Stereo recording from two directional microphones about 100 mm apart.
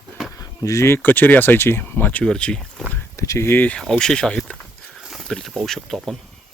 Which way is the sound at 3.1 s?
30° left (ahead or behind).